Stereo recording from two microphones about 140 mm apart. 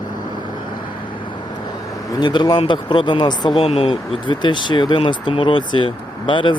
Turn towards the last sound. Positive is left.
turn(degrees=35)  # may be behind; listen again after turning